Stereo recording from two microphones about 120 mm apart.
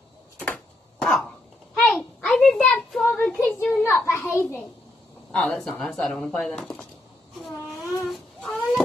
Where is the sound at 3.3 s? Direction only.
15° left (ahead or behind).